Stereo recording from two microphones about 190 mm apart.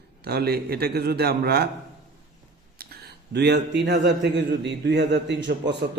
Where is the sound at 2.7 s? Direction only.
55° right (ahead or behind).